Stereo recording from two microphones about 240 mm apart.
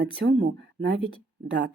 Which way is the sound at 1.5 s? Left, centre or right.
Right.